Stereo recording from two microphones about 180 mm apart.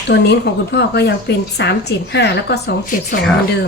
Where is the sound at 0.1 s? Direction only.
70° left (ahead or behind).